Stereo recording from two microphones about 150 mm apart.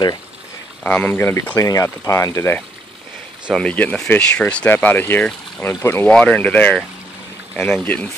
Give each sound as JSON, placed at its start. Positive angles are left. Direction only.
{"t": 0.8, "sound": "speech", "side_deg": 10}
{"t": 7.8, "sound": "speech", "side_deg": 10}